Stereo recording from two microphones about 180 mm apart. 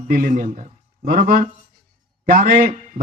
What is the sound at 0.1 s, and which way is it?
A man's voice, 50° right (ahead or behind).